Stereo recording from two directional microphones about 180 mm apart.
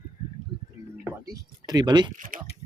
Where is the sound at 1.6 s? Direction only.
25° right (ahead or behind).